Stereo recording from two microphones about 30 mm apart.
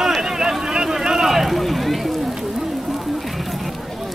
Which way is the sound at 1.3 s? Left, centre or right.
Centre.